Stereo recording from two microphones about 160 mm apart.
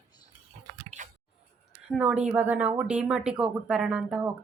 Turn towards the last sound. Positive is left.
turn(degrees=-10)  # may be behind; listen again after turning